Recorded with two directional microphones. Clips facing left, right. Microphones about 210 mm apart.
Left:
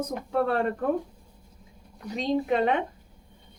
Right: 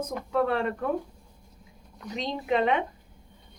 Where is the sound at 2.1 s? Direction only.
40° left (ahead or behind).